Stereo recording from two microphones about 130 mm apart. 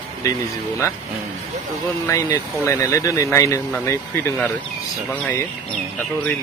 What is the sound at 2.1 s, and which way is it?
A man's voice, 25° left (ahead or behind).